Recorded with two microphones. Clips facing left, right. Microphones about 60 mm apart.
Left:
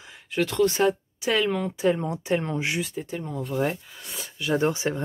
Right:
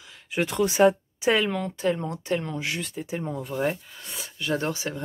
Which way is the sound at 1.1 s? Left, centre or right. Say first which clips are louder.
Right 2 dB; right.